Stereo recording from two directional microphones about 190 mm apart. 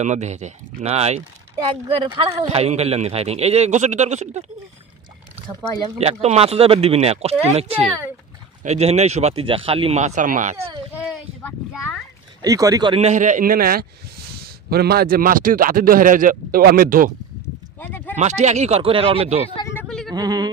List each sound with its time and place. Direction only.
0.0 s a man's voice: 35° right (ahead or behind)
2.0 s a man's voice: 25° right (ahead or behind)
5.5 s speech: 20° right (ahead or behind)
5.9 s a man's voice: 35° right (ahead or behind)
11.4 s speech: 10° left (ahead or behind)
12.4 s speech: 20° right (ahead or behind)
13.0 s a man's voice: 40° right (ahead or behind)
17.7 s a sound: 10° left (ahead or behind)
18.1 s a man's voice: 35° right (ahead or behind)
19.8 s a sound: 5° left (ahead or behind)
20.1 s speech: 20° right (ahead or behind)